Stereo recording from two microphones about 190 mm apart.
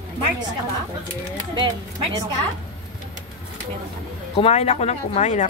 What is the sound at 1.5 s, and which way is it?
Speech, 25° right (ahead or behind).